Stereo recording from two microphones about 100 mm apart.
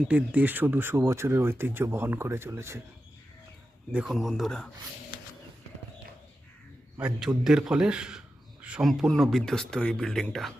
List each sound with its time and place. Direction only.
0.1 s speech: 15° right (ahead or behind)
4.0 s speech: centre (ahead or behind)
7.2 s speech: 5° right (ahead or behind)